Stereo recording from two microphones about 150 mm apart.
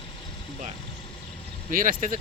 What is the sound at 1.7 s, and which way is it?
Speech, 65° right (ahead or behind).